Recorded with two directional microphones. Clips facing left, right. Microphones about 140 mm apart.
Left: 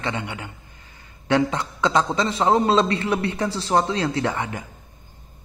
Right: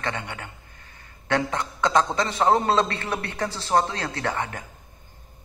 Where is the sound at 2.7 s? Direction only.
20° left (ahead or behind).